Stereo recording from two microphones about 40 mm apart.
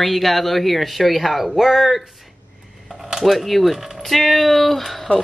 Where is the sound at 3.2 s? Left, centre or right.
Centre.